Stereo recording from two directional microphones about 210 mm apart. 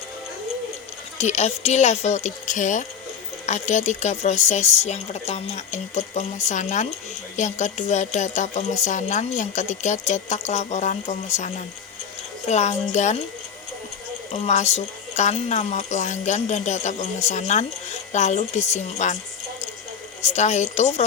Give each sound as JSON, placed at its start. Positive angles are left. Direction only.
{"t": 1.2, "sound": "speech", "side_deg": 30}
{"t": 12.5, "sound": "speech", "side_deg": 35}
{"t": 14.3, "sound": "speech", "side_deg": 30}
{"t": 20.2, "sound": "speech", "side_deg": 35}